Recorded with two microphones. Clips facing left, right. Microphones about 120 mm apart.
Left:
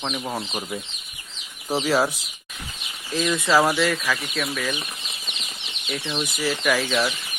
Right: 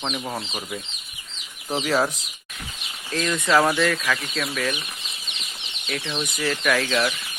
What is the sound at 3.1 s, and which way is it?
Speech, 5° left (ahead or behind).